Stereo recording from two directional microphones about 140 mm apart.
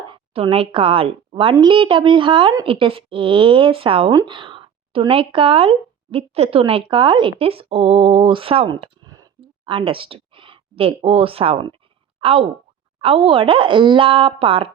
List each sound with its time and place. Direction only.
0.1 s a woman's voice: 40° right (ahead or behind)
4.1 s speech: 25° right (ahead or behind)
4.4 s a woman's voice: 40° right (ahead or behind)